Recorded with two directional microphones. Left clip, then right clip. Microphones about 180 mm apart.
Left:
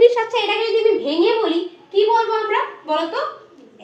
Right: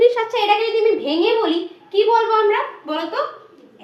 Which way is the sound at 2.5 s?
15° left (ahead or behind).